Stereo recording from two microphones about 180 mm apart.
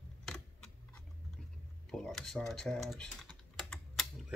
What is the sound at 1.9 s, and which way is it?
A man's voice, 5° left (ahead or behind).